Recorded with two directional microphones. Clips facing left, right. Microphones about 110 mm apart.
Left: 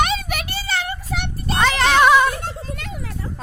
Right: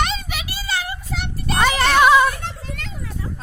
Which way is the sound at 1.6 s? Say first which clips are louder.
Even; 5° right (ahead or behind).